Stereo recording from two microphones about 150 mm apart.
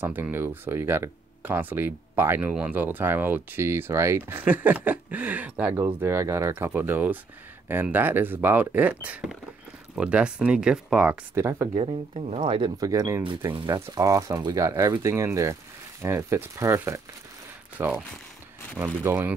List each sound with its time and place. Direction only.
0.0 s speech: 15° right (ahead or behind)
11.3 s speech: 15° right (ahead or behind)
11.7 s speech: 40° right (ahead or behind)
12.8 s speech: 20° right (ahead or behind)